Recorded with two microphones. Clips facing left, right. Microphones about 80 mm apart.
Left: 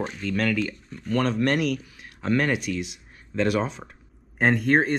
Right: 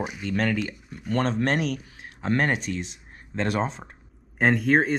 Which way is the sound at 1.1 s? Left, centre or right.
Right.